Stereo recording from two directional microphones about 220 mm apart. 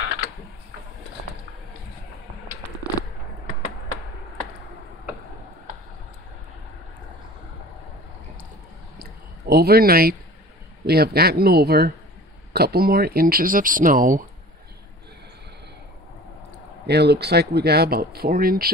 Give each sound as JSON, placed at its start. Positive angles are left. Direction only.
{"t": 9.0, "sound": "a sound", "side_deg": -45}
{"t": 10.9, "sound": "speech", "side_deg": -45}
{"t": 16.8, "sound": "speech", "side_deg": -50}